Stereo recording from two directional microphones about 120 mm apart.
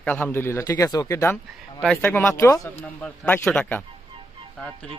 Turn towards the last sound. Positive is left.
turn(degrees=10)  # may be behind; listen again after turning